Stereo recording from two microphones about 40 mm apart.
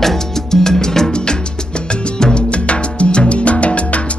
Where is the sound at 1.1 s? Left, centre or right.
Left.